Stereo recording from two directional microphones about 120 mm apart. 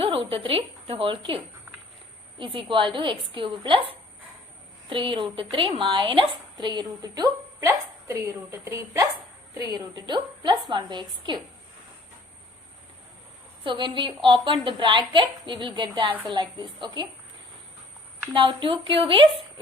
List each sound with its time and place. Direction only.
0.0 s a woman's voice: 50° right (ahead or behind)
2.4 s a woman's voice: 45° right (ahead or behind)
13.7 s a woman's voice: 40° right (ahead or behind)
18.3 s a woman's voice: 45° right (ahead or behind)